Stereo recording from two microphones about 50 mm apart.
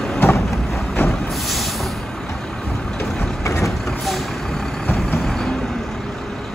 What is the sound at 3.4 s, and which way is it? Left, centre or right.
Vehicle, left.